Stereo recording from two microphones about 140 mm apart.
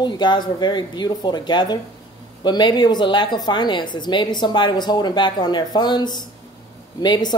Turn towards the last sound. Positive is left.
turn(degrees=35)  # may be behind; listen again after turning